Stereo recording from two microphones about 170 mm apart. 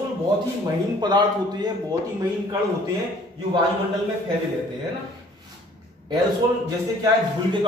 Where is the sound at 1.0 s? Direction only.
25° right (ahead or behind).